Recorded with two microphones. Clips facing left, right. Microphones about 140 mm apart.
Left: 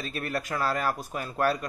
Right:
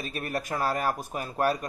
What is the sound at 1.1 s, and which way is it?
Speech, 15° right (ahead or behind).